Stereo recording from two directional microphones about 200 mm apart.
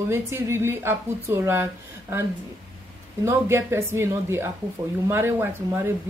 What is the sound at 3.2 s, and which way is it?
Speech, 10° right (ahead or behind).